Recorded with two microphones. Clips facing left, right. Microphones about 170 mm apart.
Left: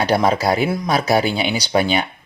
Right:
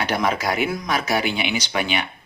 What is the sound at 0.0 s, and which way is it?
Speech, 35° left (ahead or behind).